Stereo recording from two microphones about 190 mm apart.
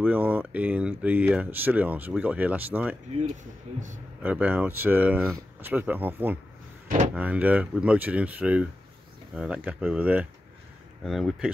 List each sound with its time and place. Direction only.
0.0 s speech: 10° right (ahead or behind)
3.7 s speech: 35° right (ahead or behind)
4.2 s speech: 10° right (ahead or behind)